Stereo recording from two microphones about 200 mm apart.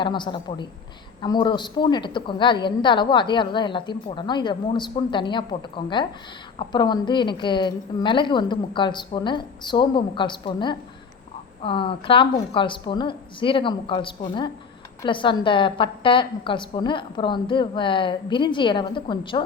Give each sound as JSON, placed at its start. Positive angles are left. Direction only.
{"t": 0.0, "sound": "a woman's voice", "side_deg": 25}